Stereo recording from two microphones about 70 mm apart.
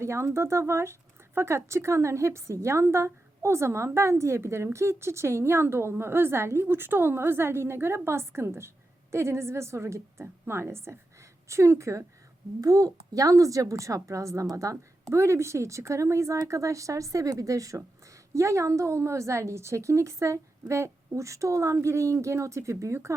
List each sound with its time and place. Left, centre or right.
0.0 s a woman's voice: right
12.6 s a woman's voice: right